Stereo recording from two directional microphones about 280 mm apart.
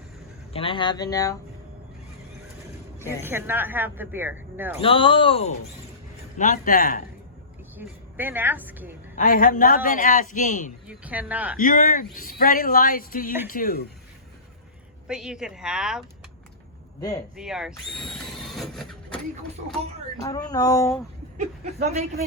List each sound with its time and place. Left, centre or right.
0.5 s speech: centre
3.2 s speech: centre
4.8 s a man's voice: centre
7.8 s speech: centre
9.1 s a man's voice: left
10.8 s speech: centre
11.6 s a man's voice: left
15.0 s speech: centre
17.0 s speech: centre
17.3 s vehicle: centre
20.2 s speech: centre
21.3 s speech: right